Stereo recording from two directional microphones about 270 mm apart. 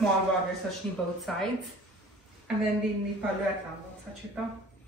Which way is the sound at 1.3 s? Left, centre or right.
Centre.